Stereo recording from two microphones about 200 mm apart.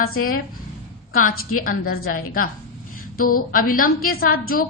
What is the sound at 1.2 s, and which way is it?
A woman's voice, 45° left (ahead or behind).